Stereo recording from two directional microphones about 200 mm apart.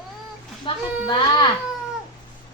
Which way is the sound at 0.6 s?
25° left (ahead or behind).